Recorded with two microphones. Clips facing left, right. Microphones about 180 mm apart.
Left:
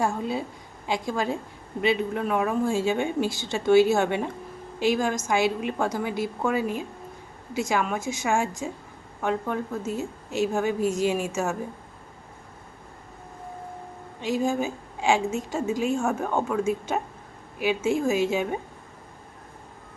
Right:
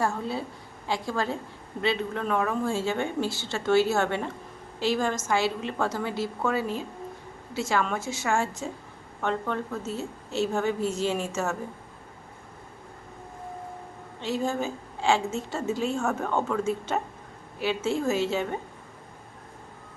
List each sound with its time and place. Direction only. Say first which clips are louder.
0.0 s a woman's voice: left 2 dB; 15° left (ahead or behind)
14.2 s a woman's voice: left 3 dB; 15° left (ahead or behind)